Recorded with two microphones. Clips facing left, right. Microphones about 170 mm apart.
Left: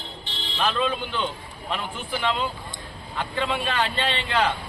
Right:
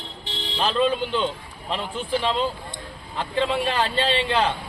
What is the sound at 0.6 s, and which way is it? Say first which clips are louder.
A man's voice: right 3 dB; 35° right (ahead or behind).